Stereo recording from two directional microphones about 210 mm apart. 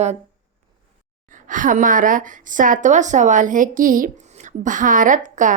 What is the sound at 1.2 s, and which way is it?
A woman's voice, 40° right (ahead or behind).